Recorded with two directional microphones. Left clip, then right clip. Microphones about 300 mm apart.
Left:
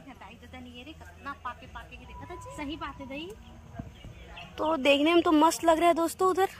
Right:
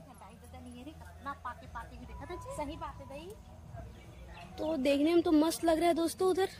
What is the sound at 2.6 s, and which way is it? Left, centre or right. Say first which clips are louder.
Speech: left 6 dB; right.